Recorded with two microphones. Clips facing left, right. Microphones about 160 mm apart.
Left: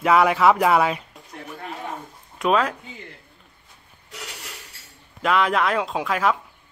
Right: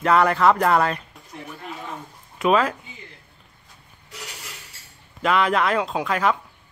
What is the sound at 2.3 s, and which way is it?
Speech, centre (ahead or behind).